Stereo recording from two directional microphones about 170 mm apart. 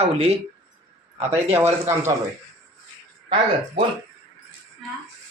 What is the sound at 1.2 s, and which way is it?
Speech, 15° right (ahead or behind).